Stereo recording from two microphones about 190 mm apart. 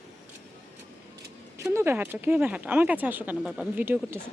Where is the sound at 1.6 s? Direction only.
15° right (ahead or behind).